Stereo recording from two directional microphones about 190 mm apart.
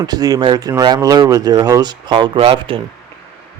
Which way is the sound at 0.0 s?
20° right (ahead or behind).